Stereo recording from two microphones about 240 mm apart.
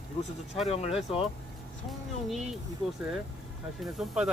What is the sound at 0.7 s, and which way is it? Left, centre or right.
Speech, left.